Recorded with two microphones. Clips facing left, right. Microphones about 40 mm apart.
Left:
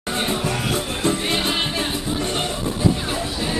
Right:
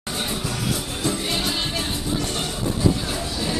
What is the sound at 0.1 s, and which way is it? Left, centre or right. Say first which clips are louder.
Music: left 5 dB; left.